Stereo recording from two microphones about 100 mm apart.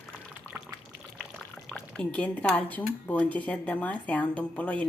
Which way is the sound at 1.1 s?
10° left (ahead or behind).